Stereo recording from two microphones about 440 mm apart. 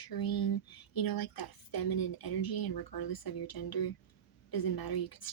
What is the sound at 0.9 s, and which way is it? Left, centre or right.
Speech, left.